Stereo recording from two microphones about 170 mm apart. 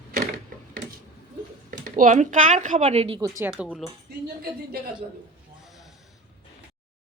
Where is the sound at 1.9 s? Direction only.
45° right (ahead or behind).